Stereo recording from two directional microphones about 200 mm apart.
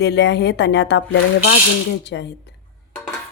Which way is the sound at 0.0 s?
60° left (ahead or behind).